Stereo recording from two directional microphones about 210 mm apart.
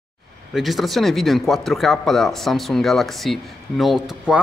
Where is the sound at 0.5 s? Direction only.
Centre (ahead or behind).